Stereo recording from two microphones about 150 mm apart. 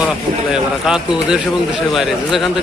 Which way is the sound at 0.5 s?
5° right (ahead or behind).